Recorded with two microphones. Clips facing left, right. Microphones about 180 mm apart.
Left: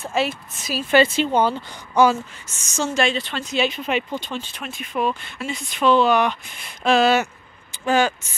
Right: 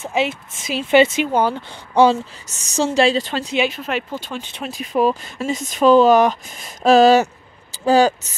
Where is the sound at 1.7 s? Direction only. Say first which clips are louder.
Right 6 dB; 30° right (ahead or behind).